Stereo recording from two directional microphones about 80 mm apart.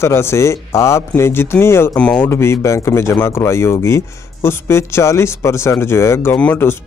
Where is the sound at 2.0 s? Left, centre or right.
Centre.